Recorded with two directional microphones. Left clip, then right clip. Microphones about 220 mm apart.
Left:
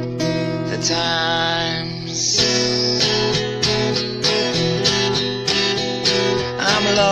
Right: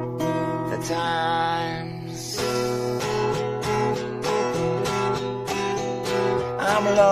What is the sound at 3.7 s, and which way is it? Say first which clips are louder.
Music: left 4 dB; 40° left (ahead or behind).